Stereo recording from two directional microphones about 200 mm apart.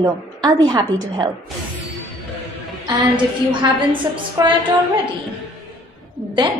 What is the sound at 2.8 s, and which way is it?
A woman's voice, 25° right (ahead or behind).